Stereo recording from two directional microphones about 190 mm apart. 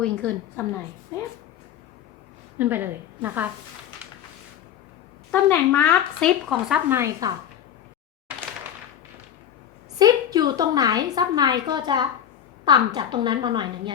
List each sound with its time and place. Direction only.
0.0 s a woman's voice: 5° left (ahead or behind)
2.6 s a woman's voice: 10° right (ahead or behind)
5.3 s speech: 10° left (ahead or behind); by 7.3 s 15° right (ahead or behind)
10.0 s a woman's voice: 20° right (ahead or behind)